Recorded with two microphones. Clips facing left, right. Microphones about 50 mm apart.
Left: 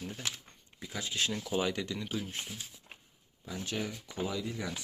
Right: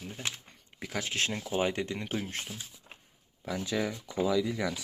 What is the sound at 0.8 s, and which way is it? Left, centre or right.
Speech, right.